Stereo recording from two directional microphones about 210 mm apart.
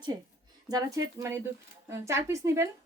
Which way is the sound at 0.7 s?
15° right (ahead or behind).